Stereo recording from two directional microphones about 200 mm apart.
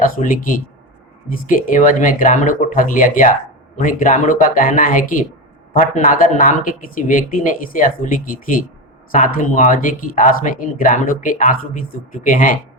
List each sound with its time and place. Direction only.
0.0 s speech: 45° left (ahead or behind)